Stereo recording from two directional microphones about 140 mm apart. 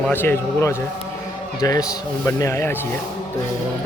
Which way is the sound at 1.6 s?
25° left (ahead or behind).